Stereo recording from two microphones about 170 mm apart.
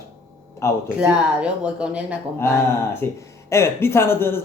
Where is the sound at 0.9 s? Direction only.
5° right (ahead or behind).